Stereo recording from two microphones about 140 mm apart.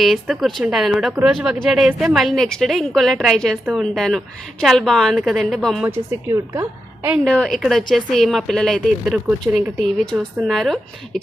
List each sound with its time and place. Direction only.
0.0 s speech: centre (ahead or behind)
5.8 s a woman's voice: 15° right (ahead or behind)
7.3 s speech: 5° left (ahead or behind)